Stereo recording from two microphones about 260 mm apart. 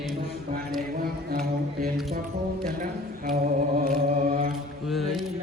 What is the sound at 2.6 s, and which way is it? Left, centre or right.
Chant, right.